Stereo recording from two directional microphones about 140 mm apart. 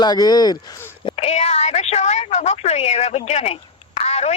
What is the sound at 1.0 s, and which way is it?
A woman's voice, 50° left (ahead or behind).